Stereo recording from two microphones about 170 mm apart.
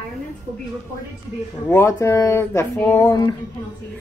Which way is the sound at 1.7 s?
15° left (ahead or behind).